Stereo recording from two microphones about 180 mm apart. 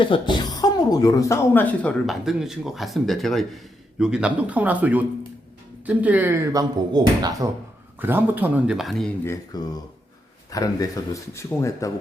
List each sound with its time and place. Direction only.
0.0 s speech: 25° left (ahead or behind); by 9.1 s centre (ahead or behind)
9.2 s speech: 20° left (ahead or behind)